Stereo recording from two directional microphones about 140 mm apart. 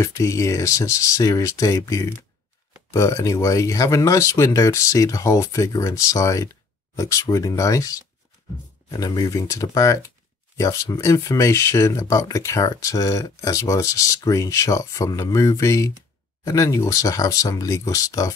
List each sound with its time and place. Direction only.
0.0 s speech: 20° left (ahead or behind)